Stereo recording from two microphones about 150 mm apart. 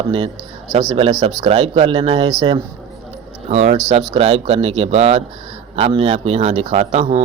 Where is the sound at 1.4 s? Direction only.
45° right (ahead or behind).